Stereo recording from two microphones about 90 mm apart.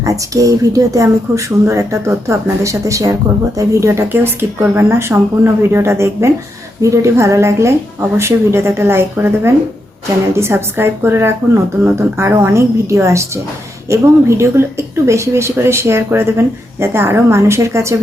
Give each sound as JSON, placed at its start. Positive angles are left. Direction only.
{"t": 0.0, "sound": "speech", "side_deg": -40}